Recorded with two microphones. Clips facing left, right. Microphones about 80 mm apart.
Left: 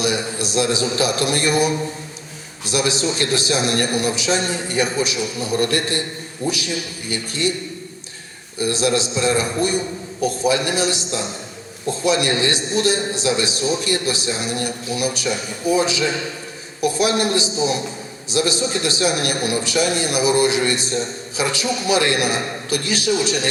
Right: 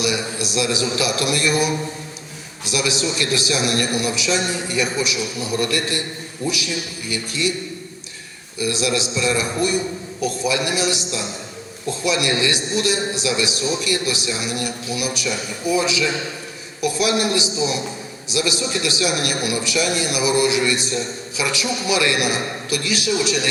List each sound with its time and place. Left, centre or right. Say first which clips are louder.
0.0 s a man's voice: left 1 dB; left
8.5 s a man's voice: left 2 dB; left